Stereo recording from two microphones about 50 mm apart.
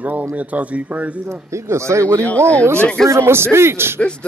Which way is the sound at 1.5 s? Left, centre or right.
Right.